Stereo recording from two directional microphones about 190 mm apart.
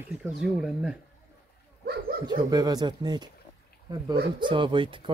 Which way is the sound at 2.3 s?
20° right (ahead or behind).